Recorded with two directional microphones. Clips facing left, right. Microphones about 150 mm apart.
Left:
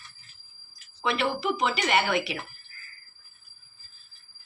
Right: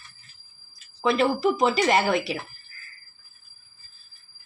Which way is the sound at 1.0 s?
35° right (ahead or behind).